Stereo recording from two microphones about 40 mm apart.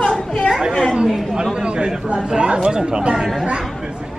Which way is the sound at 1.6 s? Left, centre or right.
Right.